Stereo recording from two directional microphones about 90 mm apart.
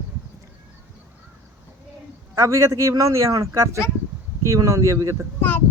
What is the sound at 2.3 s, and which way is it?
Speech, 35° right (ahead or behind).